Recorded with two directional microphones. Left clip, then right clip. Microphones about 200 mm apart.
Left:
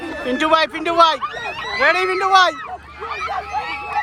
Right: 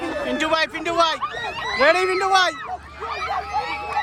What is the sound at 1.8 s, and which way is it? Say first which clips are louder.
Speech: left 1 dB; 10° right (ahead or behind).